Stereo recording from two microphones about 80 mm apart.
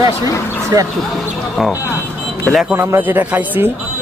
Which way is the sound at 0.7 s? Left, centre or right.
Right.